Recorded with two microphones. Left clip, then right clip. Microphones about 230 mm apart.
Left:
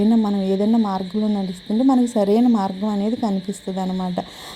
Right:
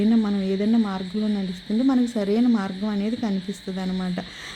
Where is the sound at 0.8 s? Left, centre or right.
Centre.